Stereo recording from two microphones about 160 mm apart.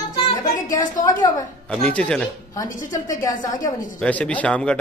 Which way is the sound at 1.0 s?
25° left (ahead or behind).